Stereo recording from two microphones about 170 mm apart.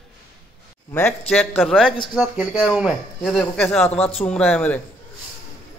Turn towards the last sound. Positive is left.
turn(degrees=10)  # may be behind; listen again after turning